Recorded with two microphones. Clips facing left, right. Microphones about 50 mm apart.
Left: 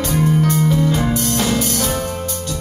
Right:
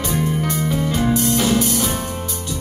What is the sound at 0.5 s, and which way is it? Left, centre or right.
Music, centre.